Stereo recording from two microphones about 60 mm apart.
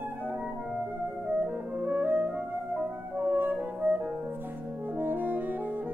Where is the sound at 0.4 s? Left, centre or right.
Right.